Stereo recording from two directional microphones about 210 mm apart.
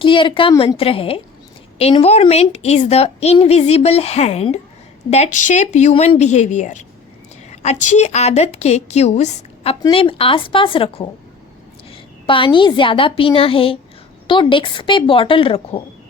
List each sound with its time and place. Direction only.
0.0 s a woman's voice: 25° left (ahead or behind)